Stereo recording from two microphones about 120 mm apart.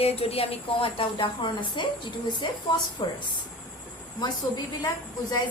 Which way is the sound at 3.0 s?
40° left (ahead or behind).